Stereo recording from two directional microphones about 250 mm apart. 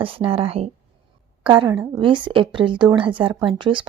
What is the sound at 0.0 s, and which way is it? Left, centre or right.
A woman's voice, right.